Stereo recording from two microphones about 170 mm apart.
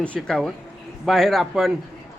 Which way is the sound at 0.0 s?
5° left (ahead or behind).